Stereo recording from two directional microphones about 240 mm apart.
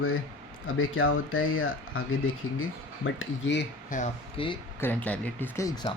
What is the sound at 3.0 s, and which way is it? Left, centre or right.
Speech, left.